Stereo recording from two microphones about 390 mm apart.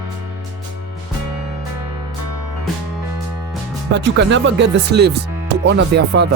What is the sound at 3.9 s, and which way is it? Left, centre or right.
Speech, right.